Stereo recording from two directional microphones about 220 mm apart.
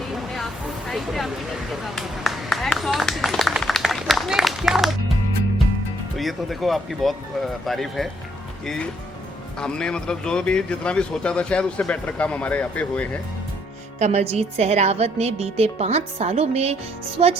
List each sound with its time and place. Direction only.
0.1 s a sound: centre (ahead or behind)
1.7 s speech: centre (ahead or behind)
6.1 s speech: centre (ahead or behind)
14.0 s a woman's voice: 30° right (ahead or behind)